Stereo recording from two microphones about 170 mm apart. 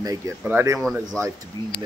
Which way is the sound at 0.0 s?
20° right (ahead or behind).